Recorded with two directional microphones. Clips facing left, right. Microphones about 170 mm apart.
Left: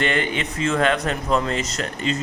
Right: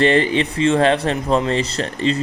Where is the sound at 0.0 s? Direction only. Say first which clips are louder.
Right 7 dB; 35° right (ahead or behind).